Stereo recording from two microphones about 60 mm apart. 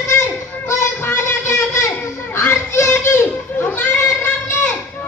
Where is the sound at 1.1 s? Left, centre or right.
Left.